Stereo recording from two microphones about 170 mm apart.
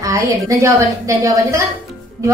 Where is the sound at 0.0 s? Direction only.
20° right (ahead or behind).